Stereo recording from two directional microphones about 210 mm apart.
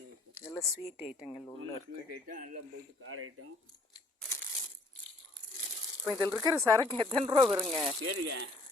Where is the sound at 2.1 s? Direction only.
40° right (ahead or behind).